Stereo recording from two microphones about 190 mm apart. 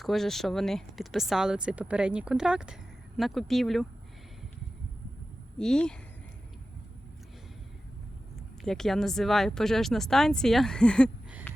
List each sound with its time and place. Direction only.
0.0 s speech: centre (ahead or behind)
5.5 s speech: 5° left (ahead or behind)
8.6 s speech: centre (ahead or behind)